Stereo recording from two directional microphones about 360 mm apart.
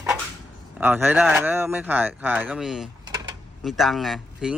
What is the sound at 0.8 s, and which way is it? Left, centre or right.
Speech, centre.